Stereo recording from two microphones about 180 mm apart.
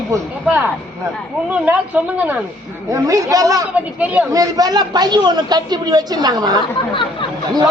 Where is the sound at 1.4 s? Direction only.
10° right (ahead or behind).